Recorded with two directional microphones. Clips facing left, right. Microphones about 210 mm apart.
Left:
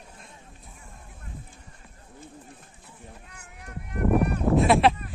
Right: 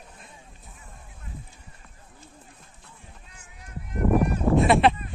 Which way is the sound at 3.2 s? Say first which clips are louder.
Left 4 dB; 65° left (ahead or behind).